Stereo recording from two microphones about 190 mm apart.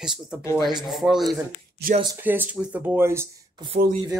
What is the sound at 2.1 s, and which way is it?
Speech, 10° right (ahead or behind).